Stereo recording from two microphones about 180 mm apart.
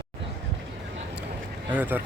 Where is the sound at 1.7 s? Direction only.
10° right (ahead or behind).